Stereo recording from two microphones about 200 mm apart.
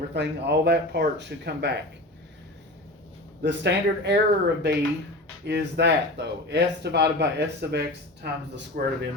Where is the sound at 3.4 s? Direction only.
60° right (ahead or behind).